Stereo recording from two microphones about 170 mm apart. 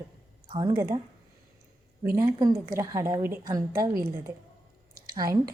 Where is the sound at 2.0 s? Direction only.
15° right (ahead or behind).